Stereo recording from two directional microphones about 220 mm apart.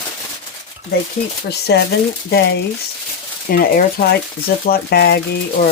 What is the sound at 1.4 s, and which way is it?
Speech, 50° left (ahead or behind).